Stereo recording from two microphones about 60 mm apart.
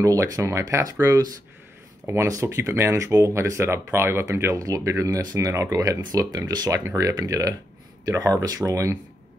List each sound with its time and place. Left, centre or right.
0.0 s speech: right
2.0 s speech: right
3.0 s speech: right
4.6 s speech: right